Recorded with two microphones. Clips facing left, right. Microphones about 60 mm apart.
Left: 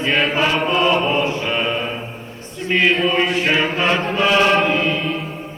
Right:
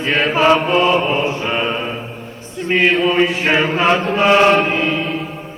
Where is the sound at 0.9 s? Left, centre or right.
Centre.